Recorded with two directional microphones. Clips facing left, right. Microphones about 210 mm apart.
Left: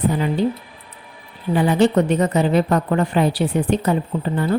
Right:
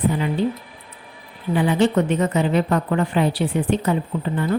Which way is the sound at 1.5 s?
40° left (ahead or behind).